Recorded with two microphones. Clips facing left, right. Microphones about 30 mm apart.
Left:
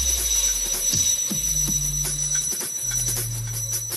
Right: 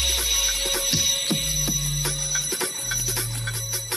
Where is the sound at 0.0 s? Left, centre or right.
Right.